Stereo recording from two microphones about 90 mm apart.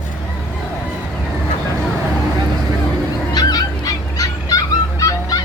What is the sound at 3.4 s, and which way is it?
Fowl, 45° left (ahead or behind).